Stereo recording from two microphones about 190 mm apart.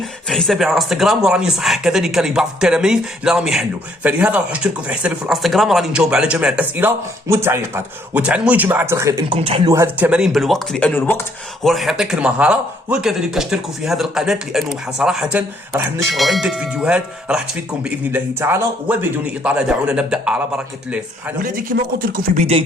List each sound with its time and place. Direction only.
0.3 s speech: centre (ahead or behind); by 9.2 s 15° right (ahead or behind)
9.3 s speech: 25° right (ahead or behind)
9.7 s speech: 10° right (ahead or behind); by 11.3 s 10° left (ahead or behind)
11.6 s a man's voice: centre (ahead or behind)
21.4 s speech: 45° right (ahead or behind)